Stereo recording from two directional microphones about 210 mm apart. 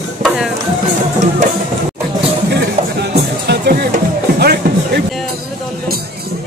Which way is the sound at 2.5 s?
55° right (ahead or behind).